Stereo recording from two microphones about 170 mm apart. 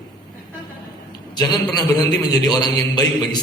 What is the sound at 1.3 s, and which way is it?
A man's voice, 25° left (ahead or behind).